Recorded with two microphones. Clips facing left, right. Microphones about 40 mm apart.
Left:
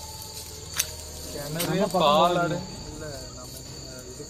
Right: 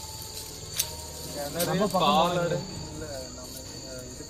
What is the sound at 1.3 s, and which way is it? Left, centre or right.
Speech, centre.